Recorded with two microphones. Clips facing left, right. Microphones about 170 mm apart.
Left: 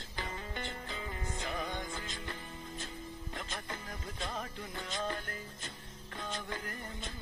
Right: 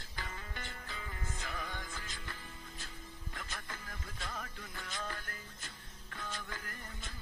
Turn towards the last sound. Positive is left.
turn(degrees=25)  # may be behind; listen again after turning